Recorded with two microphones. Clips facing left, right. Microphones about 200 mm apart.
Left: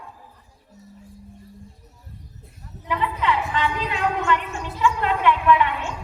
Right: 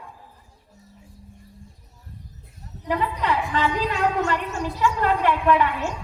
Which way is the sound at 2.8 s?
40° right (ahead or behind).